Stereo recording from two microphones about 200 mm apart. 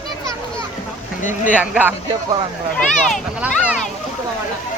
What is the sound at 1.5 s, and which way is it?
Speech, 5° right (ahead or behind).